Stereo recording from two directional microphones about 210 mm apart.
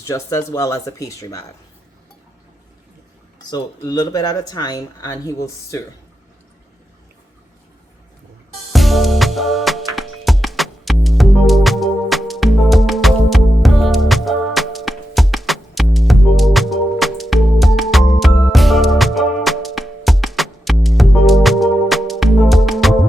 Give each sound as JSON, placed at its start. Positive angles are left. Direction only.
{"t": 0.1, "sound": "speech", "side_deg": 15}
{"t": 3.5, "sound": "speech", "side_deg": 20}
{"t": 8.7, "sound": "music", "side_deg": 0}